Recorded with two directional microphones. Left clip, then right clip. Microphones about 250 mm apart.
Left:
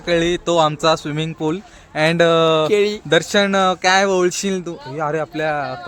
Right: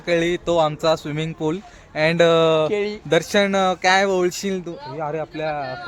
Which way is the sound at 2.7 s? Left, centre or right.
Left.